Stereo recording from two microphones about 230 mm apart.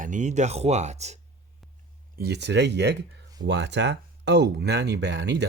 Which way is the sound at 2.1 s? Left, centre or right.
Right.